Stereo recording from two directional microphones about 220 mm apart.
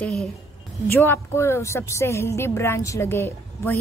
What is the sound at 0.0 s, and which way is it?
A woman's voice, centre (ahead or behind).